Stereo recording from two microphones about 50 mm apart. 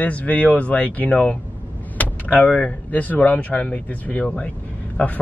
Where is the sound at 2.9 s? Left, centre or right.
Left.